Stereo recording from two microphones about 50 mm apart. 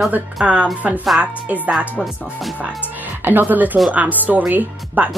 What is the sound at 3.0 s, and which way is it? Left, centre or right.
Speech, right.